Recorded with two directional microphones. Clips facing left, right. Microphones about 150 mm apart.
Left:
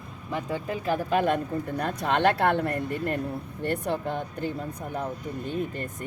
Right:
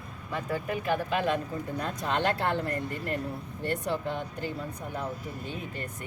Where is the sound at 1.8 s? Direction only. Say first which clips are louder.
Left 5 dB; 65° left (ahead or behind).